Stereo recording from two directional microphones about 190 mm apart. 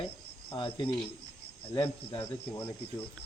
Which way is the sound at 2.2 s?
15° left (ahead or behind).